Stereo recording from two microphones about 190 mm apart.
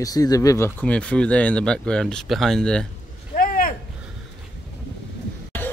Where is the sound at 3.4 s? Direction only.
45° left (ahead or behind).